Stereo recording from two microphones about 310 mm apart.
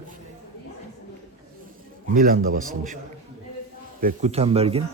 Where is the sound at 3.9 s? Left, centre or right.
Right.